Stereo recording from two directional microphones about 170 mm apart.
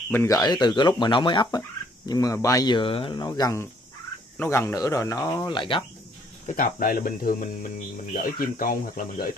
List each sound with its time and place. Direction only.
0.1 s speech: 15° left (ahead or behind)
5.5 s speech: 30° left (ahead or behind)
6.4 s speech: 50° left (ahead or behind)